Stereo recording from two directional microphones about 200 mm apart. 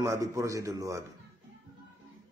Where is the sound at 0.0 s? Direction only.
15° right (ahead or behind).